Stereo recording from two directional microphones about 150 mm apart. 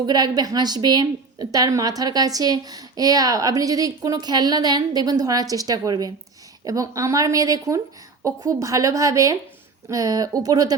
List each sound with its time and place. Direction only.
0.0 s a woman's voice: 25° right (ahead or behind)